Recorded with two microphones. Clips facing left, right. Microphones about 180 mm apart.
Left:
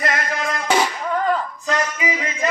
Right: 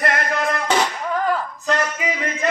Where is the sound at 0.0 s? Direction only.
55° right (ahead or behind).